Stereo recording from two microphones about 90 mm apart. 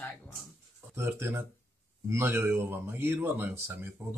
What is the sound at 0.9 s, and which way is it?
Speech, 25° right (ahead or behind).